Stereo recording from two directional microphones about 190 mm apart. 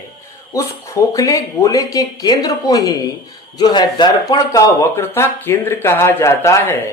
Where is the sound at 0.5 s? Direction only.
15° left (ahead or behind).